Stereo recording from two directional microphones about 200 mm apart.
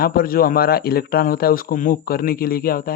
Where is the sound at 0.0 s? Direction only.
50° left (ahead or behind).